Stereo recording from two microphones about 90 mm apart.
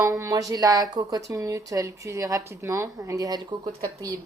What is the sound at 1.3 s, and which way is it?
Speech, 35° right (ahead or behind).